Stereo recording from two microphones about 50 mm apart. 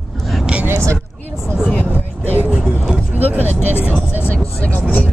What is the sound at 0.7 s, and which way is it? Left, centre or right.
Vehicle, right.